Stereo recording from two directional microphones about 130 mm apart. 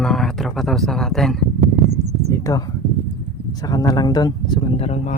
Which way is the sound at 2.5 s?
25° left (ahead or behind).